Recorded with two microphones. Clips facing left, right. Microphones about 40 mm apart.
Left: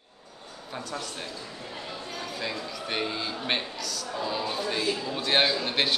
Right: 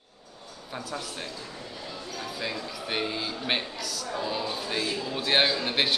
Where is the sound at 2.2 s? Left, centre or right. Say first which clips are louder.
Right 1 dB; centre.